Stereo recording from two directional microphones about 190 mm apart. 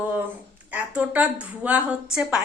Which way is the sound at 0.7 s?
5° right (ahead or behind).